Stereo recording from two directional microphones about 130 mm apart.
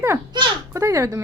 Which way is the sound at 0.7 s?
20° right (ahead or behind).